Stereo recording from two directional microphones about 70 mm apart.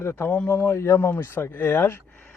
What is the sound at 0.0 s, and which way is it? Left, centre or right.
Speech, left.